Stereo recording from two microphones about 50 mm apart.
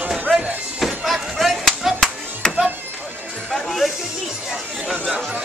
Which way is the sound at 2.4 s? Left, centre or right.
Centre.